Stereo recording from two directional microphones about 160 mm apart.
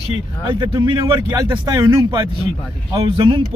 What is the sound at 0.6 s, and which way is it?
Speech, 25° right (ahead or behind).